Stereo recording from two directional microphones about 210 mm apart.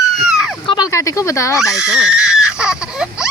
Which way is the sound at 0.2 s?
Centre (ahead or behind).